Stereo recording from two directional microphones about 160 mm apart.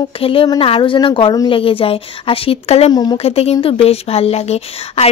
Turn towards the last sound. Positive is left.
turn(degrees=40)  # may be behind; listen again after turning